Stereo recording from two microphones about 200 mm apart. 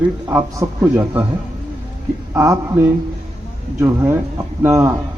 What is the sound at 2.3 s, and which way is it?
Speech, 15° right (ahead or behind).